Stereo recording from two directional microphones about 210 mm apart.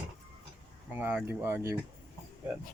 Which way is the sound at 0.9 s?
10° right (ahead or behind).